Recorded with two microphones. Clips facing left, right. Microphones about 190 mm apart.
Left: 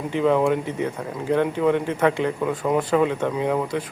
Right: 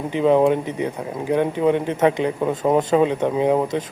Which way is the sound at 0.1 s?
20° right (ahead or behind).